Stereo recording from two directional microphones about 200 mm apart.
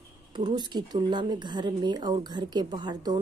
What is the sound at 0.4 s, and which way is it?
Speech, 20° right (ahead or behind).